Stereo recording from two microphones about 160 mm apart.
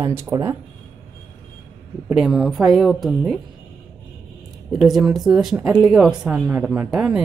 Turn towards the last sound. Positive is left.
turn(degrees=-5)  # may be behind; listen again after turning